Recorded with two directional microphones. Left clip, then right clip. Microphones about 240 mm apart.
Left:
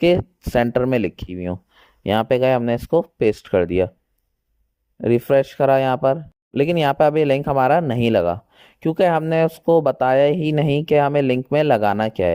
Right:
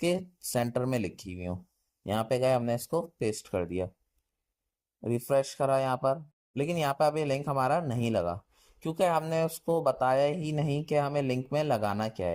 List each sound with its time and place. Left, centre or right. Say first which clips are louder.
0.0 s speech: left 13 dB; left
4.9 s speech: left 12 dB; left